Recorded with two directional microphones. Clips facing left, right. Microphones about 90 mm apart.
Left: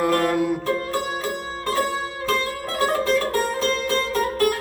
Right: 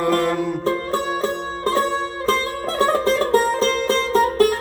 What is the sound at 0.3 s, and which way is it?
Music, 5° left (ahead or behind).